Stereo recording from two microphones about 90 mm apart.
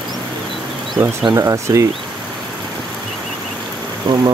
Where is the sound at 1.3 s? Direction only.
35° right (ahead or behind).